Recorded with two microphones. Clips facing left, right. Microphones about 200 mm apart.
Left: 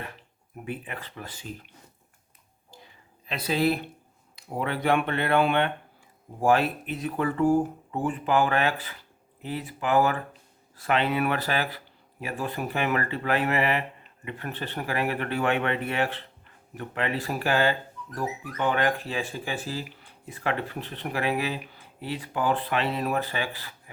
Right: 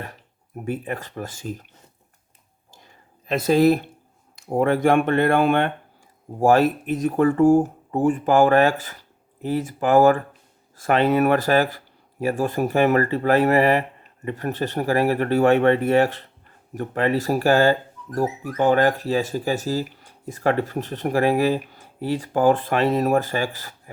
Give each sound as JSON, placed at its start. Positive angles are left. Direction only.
{"t": 0.0, "sound": "speech", "side_deg": -40}
{"t": 2.7, "sound": "a sound", "side_deg": -45}
{"t": 4.4, "sound": "speech", "side_deg": -45}